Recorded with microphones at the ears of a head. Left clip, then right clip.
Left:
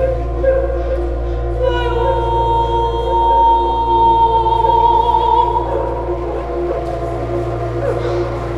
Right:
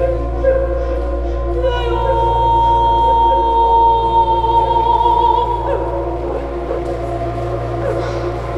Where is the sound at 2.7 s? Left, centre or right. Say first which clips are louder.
Right 5 dB; right.